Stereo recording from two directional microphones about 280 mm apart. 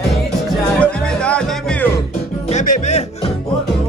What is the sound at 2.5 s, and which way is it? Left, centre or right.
Music, left.